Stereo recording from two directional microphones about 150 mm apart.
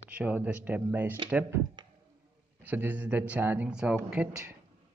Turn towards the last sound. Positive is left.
turn(degrees=-10)  # may be behind; listen again after turning